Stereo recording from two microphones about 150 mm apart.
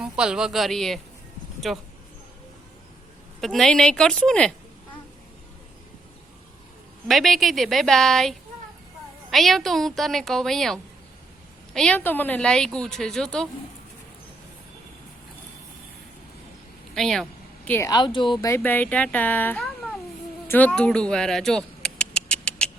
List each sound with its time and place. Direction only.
0.0 s a woman's voice: 5° right (ahead or behind)
3.4 s speech: 5° left (ahead or behind)
7.1 s speech: centre (ahead or behind)
16.9 s speech: centre (ahead or behind)
17.7 s speech: 20° left (ahead or behind)
18.4 s speech: 15° left (ahead or behind)
20.5 s a sound: 10° left (ahead or behind)